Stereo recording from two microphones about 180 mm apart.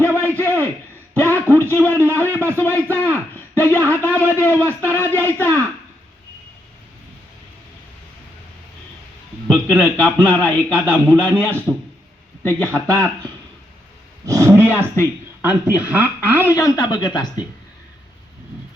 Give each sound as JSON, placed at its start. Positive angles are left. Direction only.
{"t": 0.0, "sound": "a sound", "side_deg": 10}
{"t": 1.2, "sound": "a man's voice", "side_deg": 10}
{"t": 9.5, "sound": "a man's voice", "side_deg": 5}
{"t": 14.3, "sound": "roar", "side_deg": -15}
{"t": 14.6, "sound": "speech", "side_deg": -10}
{"t": 16.5, "sound": "speech", "side_deg": 20}